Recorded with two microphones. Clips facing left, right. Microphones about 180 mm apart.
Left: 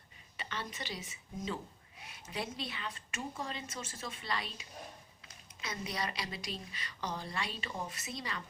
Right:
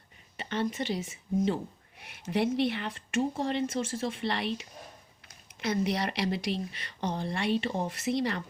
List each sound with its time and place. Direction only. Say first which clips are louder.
0.3 s speech: right 11 dB; 50° right (ahead or behind)
2.0 s speech: right 13 dB; 70° right (ahead or behind)
3.2 s speech: right 13 dB; 30° right (ahead or behind)
3.5 s speech: right 14 dB; 65° right (ahead or behind)
5.8 s speech: right 6 dB; 65° right (ahead or behind)